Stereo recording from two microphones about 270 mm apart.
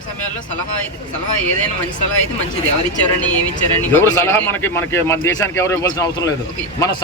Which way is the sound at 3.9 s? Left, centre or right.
Centre.